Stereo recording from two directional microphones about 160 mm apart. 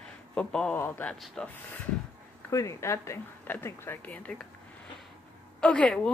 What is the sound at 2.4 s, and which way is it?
Speech, 20° left (ahead or behind).